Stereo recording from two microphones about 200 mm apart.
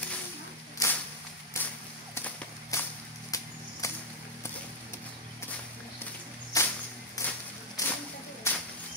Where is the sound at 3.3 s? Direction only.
15° left (ahead or behind).